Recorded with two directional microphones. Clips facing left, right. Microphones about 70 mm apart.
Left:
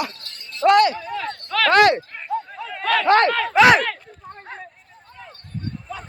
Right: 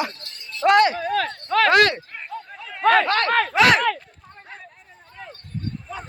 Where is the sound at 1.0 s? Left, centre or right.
Right.